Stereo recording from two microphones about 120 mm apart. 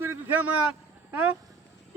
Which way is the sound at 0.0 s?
15° right (ahead or behind).